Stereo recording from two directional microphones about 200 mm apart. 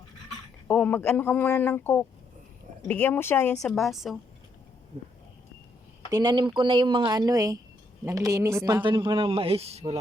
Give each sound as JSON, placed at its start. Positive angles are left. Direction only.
{"t": 0.7, "sound": "a woman's voice", "side_deg": 10}
{"t": 6.1, "sound": "a man's voice", "side_deg": -20}